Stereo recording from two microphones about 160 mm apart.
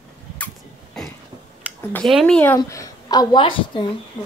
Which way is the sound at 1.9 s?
Centre (ahead or behind).